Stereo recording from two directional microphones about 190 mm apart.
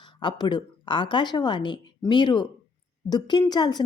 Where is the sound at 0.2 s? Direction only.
25° left (ahead or behind).